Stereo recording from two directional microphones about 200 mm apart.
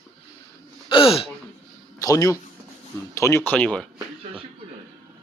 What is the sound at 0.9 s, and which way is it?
Speech, 30° left (ahead or behind).